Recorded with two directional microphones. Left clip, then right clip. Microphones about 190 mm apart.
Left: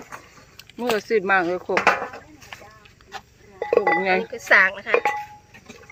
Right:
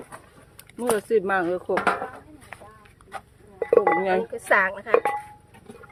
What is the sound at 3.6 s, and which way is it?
Speech, 10° right (ahead or behind).